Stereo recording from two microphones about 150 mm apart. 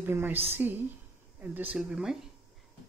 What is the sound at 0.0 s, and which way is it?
A woman's voice, 15° right (ahead or behind).